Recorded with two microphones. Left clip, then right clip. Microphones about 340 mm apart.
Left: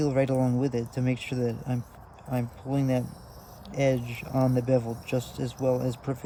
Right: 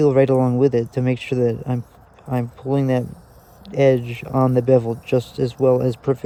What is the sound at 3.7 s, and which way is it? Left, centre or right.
Speech, right.